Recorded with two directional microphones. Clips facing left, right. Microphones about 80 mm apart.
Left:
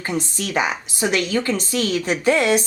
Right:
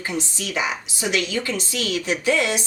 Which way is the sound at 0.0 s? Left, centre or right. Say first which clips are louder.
Left 3 dB; left.